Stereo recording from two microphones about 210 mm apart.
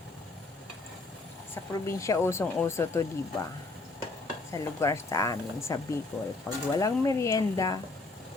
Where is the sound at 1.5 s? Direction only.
15° left (ahead or behind).